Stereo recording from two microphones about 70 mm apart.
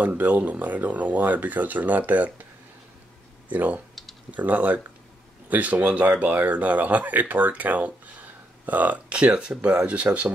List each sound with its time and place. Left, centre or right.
0.0 s speech: right
3.5 s speech: right